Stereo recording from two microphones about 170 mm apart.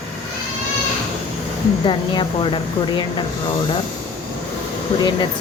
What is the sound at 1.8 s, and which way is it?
Speech, 30° left (ahead or behind).